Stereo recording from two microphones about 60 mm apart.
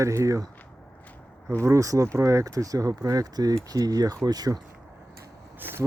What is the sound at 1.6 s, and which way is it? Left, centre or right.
Speech, right.